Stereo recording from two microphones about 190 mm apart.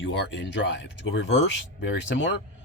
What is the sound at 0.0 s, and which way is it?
Speech, 70° left (ahead or behind).